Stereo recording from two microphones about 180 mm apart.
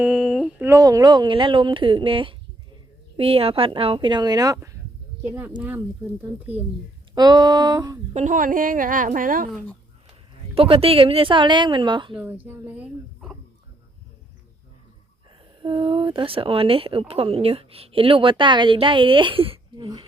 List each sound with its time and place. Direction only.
0.0 s a sound: centre (ahead or behind)
0.6 s speech: 20° right (ahead or behind)
7.2 s speech: 20° right (ahead or behind)
8.1 s a woman's voice: 45° right (ahead or behind)
10.5 s speech: 30° right (ahead or behind)
12.1 s speech: 10° right (ahead or behind)
15.6 s speech: 30° right (ahead or behind)